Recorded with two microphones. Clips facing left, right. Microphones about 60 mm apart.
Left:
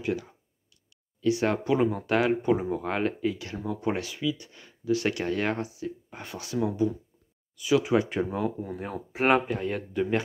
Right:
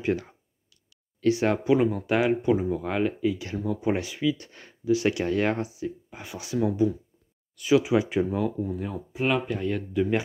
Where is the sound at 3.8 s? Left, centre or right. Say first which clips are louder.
Right 1 dB; centre.